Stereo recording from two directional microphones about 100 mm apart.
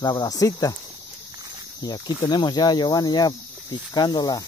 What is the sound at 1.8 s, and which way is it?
Speech, 45° left (ahead or behind).